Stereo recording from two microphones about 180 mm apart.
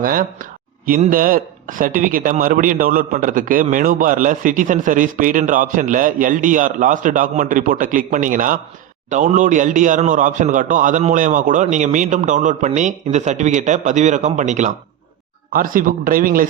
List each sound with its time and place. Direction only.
0.0 s speech: 50° right (ahead or behind)